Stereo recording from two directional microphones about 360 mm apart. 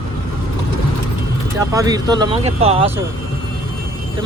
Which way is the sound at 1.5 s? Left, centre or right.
Centre.